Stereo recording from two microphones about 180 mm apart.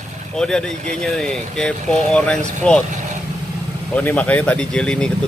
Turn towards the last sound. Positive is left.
turn(degrees=5)  # may be behind; listen again after turning